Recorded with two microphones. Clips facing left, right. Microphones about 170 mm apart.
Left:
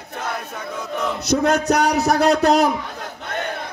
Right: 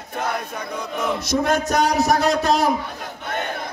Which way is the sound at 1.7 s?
65° left (ahead or behind).